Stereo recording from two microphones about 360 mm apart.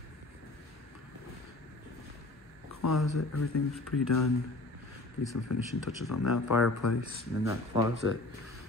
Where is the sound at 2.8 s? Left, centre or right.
Left.